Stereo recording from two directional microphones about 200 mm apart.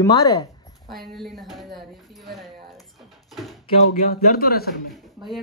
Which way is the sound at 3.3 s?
Centre (ahead or behind).